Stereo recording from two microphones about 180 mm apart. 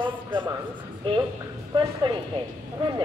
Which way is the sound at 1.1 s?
30° right (ahead or behind).